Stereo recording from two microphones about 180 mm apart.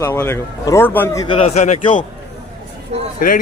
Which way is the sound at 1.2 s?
35° left (ahead or behind).